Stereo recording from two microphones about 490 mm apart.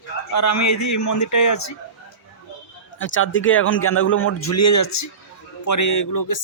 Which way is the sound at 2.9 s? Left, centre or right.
Left.